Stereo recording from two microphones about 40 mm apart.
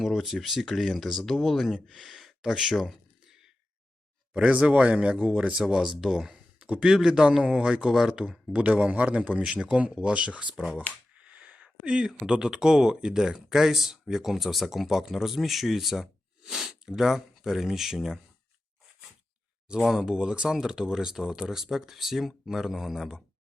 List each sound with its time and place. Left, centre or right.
0.0 s speech: centre
4.6 s speech: right
5.1 s a man's voice: right
5.5 s speech: centre
8.5 s a man's voice: right
11.2 s a sound: right
11.9 s speech: right
19.9 s speech: centre